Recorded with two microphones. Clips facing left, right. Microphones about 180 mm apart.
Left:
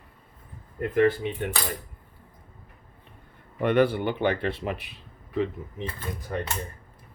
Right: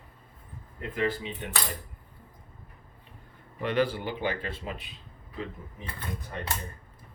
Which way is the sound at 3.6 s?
60° left (ahead or behind).